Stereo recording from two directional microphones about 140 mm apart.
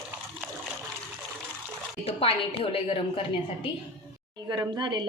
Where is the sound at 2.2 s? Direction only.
40° left (ahead or behind).